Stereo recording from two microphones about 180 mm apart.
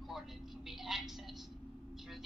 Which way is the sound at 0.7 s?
Centre (ahead or behind).